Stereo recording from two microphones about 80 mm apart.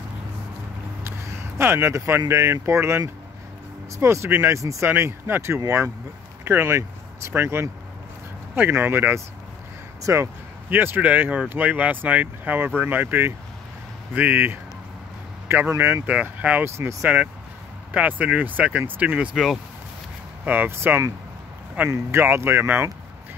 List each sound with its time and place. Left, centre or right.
1.6 s speech: right
4.0 s speech: right
10.0 s speech: right
10.7 s speech: right
15.7 s speech: right
16.1 s speech: centre
16.6 s speech: right
17.9 s speech: centre
19.3 s speech: centre
20.4 s speech: right
22.1 s speech: right